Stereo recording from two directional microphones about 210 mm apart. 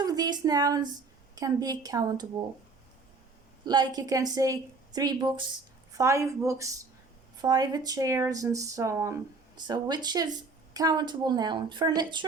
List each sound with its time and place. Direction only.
0.0 s a woman's voice: 20° right (ahead or behind)
3.7 s a woman's voice: 20° right (ahead or behind)